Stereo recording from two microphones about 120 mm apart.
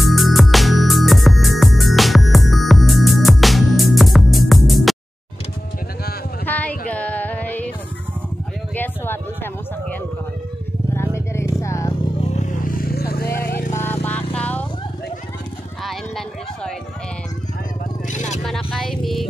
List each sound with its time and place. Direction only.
0.0 s music: centre (ahead or behind)
6.4 s music: 15° left (ahead or behind)
8.7 s a sound: 15° left (ahead or behind)
10.9 s vehicle: 20° left (ahead or behind)
13.7 s motorcycle: 15° left (ahead or behind)
15.8 s clip-clop: centre (ahead or behind)
18.4 s music: centre (ahead or behind)